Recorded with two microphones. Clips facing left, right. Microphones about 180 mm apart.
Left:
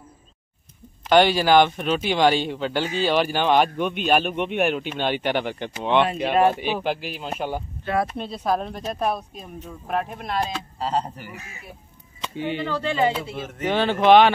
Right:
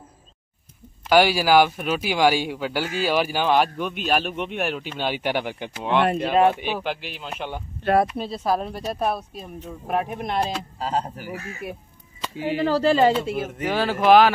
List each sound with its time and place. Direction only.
1.0 s speech: 5° right (ahead or behind)
6.5 s speech: 45° left (ahead or behind)
8.2 s speech: 5° right (ahead or behind)
10.8 s speech: 5° right (ahead or behind)
12.2 s chop: 5° right (ahead or behind)
12.6 s speech: 35° right (ahead or behind)
13.3 s speech: 10° right (ahead or behind)